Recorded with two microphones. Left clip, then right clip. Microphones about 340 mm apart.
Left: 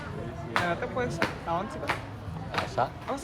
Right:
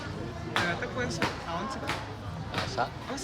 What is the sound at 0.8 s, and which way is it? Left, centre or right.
Speech, centre.